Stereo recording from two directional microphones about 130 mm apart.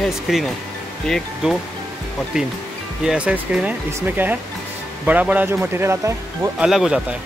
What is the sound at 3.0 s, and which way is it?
Speech, 5° right (ahead or behind).